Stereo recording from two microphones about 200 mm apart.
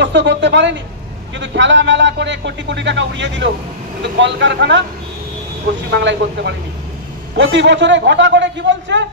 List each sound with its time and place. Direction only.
0.0 s a man's voice: 65° right (ahead or behind)
5.9 s a man's voice: 60° right (ahead or behind)